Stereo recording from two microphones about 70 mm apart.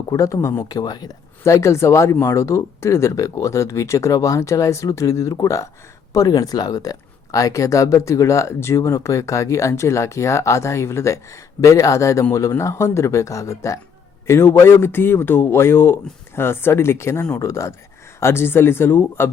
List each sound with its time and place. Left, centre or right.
0.1 s speech: left
0.7 s speech: left
1.5 s speech: left